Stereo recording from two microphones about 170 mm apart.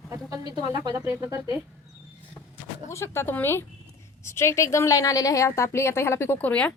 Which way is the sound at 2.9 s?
15° left (ahead or behind).